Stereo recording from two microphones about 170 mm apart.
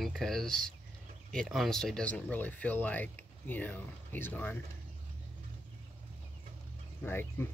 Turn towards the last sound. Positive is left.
turn(degrees=15)  # may be behind; listen again after turning